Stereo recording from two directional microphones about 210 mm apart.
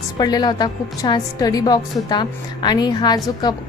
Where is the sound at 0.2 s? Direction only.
20° left (ahead or behind).